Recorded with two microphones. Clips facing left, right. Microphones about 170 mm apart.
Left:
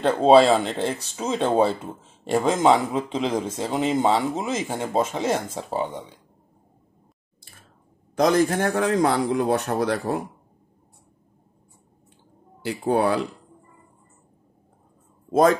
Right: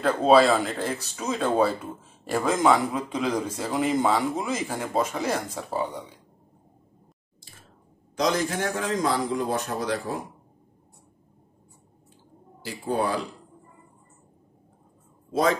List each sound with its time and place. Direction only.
0.0 s speech: 30° left (ahead or behind)
8.2 s a man's voice: 55° left (ahead or behind)
12.6 s a man's voice: 65° left (ahead or behind)